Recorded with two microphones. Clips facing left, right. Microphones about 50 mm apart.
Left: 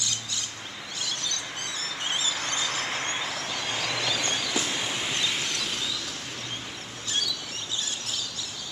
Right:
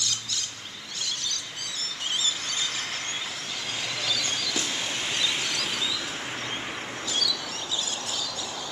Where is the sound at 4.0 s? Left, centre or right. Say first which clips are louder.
Left 1 dB; left.